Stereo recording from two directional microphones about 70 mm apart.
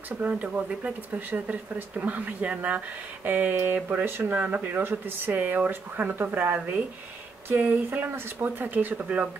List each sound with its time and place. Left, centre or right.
0.2 s speech: centre